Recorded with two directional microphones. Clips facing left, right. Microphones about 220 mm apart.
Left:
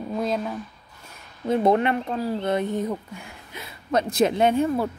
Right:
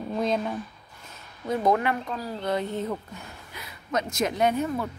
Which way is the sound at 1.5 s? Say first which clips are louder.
Left 4 dB; 25° left (ahead or behind).